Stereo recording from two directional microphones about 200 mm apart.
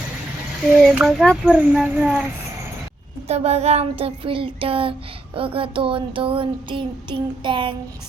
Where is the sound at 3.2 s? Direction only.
30° right (ahead or behind).